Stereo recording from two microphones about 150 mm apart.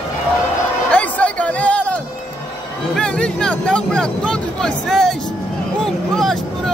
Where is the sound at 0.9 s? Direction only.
10° left (ahead or behind).